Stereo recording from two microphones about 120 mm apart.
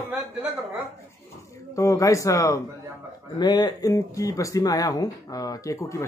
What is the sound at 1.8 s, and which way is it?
Speech, 25° left (ahead or behind).